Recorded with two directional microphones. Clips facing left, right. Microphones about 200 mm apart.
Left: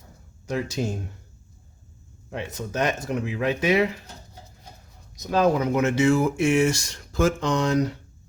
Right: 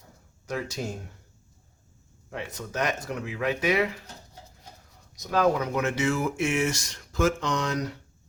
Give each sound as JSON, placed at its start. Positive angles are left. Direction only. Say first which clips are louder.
{"t": 0.4, "sound": "speech", "louder": "left 5 dB", "side_deg": 25}
{"t": 2.3, "sound": "speech", "louder": "left 4 dB", "side_deg": 25}
{"t": 5.1, "sound": "speech", "louder": "left 3 dB", "side_deg": 25}